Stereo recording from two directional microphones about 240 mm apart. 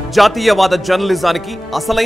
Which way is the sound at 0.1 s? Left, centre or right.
Centre.